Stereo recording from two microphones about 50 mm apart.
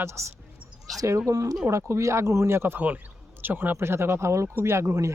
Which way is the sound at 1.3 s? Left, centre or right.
Right.